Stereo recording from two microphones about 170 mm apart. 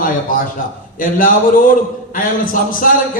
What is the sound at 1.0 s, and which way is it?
Speech, 55° left (ahead or behind).